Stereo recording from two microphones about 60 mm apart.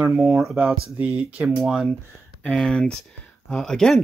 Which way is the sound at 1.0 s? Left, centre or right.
Centre.